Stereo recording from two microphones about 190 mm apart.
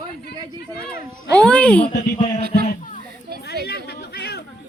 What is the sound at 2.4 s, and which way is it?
Speech, 55° right (ahead or behind).